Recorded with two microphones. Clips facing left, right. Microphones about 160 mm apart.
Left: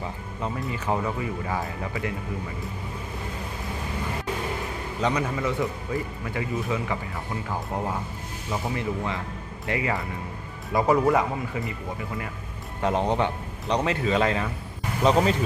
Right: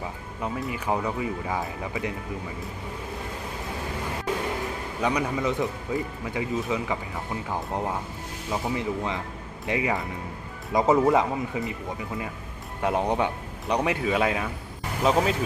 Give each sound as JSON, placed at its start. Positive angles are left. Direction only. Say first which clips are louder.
{"t": 0.0, "sound": "speech", "louder": "left 1 dB", "side_deg": -10}
{"t": 5.0, "sound": "a man's voice", "louder": "even", "side_deg": -15}
{"t": 8.7, "sound": "a man's voice", "louder": "right 1 dB", "side_deg": -15}
{"t": 12.8, "sound": "a man's voice", "louder": "left 1 dB", "side_deg": -10}